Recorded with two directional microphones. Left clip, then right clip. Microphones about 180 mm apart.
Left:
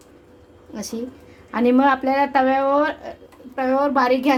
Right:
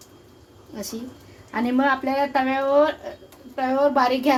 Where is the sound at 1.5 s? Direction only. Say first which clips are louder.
Left 5 dB; 50° left (ahead or behind).